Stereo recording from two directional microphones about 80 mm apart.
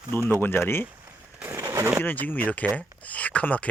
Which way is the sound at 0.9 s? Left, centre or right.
Right.